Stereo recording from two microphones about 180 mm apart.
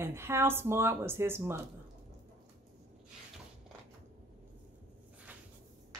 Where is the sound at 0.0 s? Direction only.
15° right (ahead or behind).